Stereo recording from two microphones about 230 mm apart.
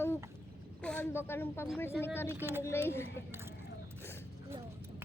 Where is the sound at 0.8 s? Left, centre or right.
Centre.